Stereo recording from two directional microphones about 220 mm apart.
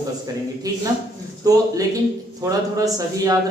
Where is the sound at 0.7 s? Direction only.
15° right (ahead or behind).